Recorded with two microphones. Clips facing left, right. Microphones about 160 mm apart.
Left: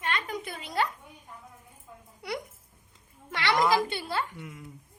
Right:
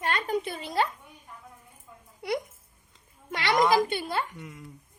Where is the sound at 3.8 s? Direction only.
20° right (ahead or behind).